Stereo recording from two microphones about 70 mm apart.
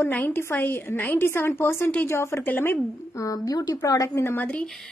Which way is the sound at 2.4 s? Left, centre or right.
Left.